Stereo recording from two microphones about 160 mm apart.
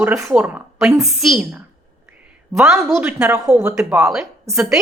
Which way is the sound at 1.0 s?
Centre (ahead or behind).